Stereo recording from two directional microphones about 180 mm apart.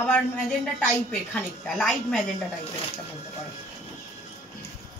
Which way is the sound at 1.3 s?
5° left (ahead or behind).